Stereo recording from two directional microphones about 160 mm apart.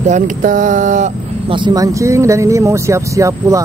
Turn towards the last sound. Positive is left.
turn(degrees=-20)  # may be behind; listen again after turning